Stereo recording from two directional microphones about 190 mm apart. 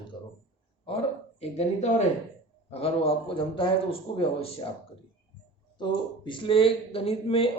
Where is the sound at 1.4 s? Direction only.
35° left (ahead or behind).